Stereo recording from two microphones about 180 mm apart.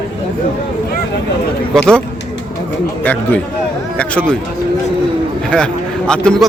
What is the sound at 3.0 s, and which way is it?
Speech, 10° left (ahead or behind).